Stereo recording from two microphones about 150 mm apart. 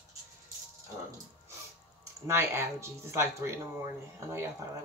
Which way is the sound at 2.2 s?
15° right (ahead or behind).